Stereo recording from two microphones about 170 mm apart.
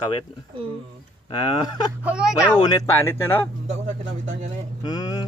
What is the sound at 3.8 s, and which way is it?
Speech, 40° right (ahead or behind).